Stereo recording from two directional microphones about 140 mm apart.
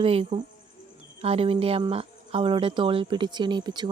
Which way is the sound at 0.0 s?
45° right (ahead or behind).